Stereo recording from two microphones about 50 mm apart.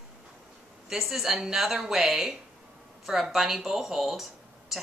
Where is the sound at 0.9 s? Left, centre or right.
Centre.